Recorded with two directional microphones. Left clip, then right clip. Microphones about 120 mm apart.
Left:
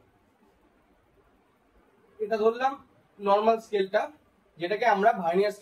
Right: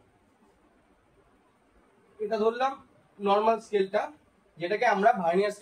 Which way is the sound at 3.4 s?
Centre (ahead or behind).